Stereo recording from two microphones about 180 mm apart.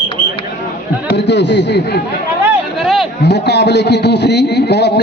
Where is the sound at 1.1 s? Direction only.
75° left (ahead or behind).